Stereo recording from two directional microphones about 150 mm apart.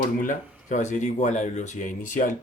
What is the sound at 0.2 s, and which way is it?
Speech, 60° left (ahead or behind).